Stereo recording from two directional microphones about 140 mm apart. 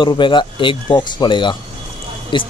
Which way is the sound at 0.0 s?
35° left (ahead or behind).